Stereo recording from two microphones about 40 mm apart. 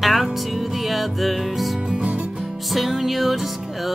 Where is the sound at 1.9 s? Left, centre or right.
Right.